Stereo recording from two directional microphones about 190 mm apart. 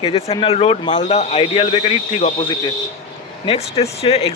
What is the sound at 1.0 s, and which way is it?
A man's voice, 35° left (ahead or behind).